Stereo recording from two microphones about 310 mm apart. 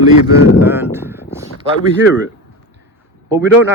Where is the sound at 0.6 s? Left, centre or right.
Centre.